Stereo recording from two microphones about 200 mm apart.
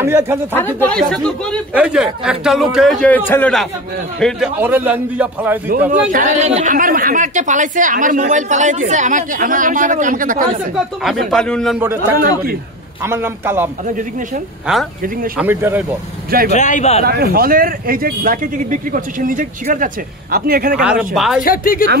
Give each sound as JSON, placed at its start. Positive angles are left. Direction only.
{"t": 0.0, "sound": "a man's voice", "side_deg": -10}
{"t": 0.5, "sound": "a man's voice", "side_deg": 10}
{"t": 4.6, "sound": "a man's voice", "side_deg": -10}
{"t": 5.9, "sound": "speech", "side_deg": -40}
{"t": 11.2, "sound": "a man's voice", "side_deg": 5}
{"t": 13.0, "sound": "a man's voice", "side_deg": -10}
{"t": 14.7, "sound": "a man's voice", "side_deg": -5}
{"t": 16.3, "sound": "speech", "side_deg": -45}
{"t": 16.5, "sound": "a man's voice", "side_deg": 35}
{"t": 17.0, "sound": "speech", "side_deg": -50}
{"t": 20.8, "sound": "a man's voice", "side_deg": -5}
{"t": 21.4, "sound": "a woman's voice", "side_deg": 45}